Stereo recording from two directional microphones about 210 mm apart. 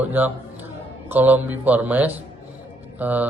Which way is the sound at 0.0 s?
10° right (ahead or behind).